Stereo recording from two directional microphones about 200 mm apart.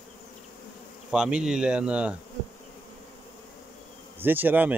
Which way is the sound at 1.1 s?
5° right (ahead or behind).